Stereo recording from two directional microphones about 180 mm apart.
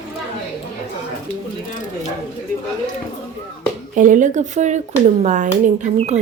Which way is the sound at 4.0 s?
45° right (ahead or behind).